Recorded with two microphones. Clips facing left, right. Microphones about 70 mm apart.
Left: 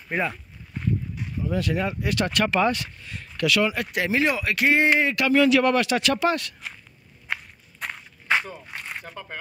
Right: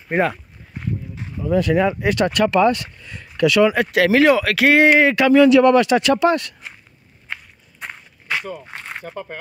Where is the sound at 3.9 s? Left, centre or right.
Right.